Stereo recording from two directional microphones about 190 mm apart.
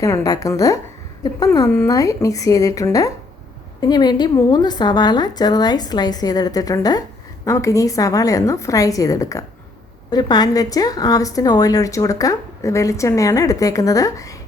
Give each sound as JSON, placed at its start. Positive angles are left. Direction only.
{"t": 0.0, "sound": "a woman's voice", "side_deg": 15}